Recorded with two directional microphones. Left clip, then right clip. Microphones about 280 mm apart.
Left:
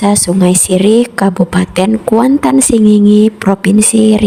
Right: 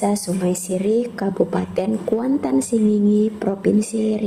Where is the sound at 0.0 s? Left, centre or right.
Left.